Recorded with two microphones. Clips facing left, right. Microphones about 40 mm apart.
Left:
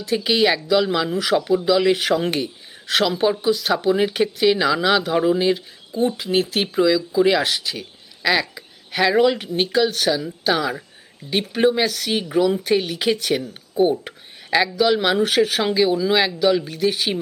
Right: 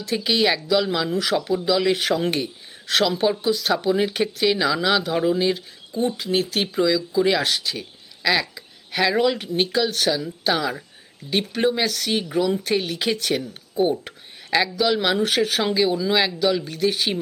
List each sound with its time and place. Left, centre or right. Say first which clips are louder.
0.3 s speech: left 2 dB; centre